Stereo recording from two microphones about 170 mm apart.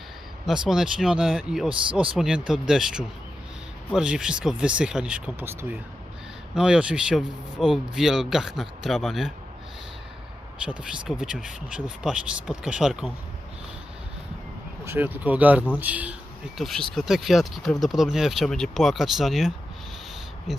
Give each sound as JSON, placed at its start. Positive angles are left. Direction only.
{"t": 0.4, "sound": "speech", "side_deg": -5}
{"t": 10.6, "sound": "speech", "side_deg": -5}
{"t": 14.8, "sound": "speech", "side_deg": -10}